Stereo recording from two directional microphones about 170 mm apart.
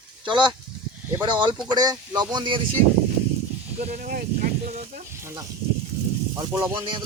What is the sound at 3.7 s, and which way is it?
Speech, 40° right (ahead or behind).